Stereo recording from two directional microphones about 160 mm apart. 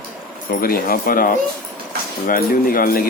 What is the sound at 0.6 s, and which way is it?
Speech, 65° left (ahead or behind).